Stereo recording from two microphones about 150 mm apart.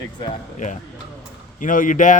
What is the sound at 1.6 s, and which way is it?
Speech, 60° left (ahead or behind).